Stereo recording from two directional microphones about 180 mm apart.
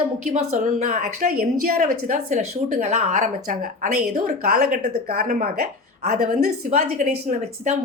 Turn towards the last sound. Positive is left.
turn(degrees=-40)  # may be behind; listen again after turning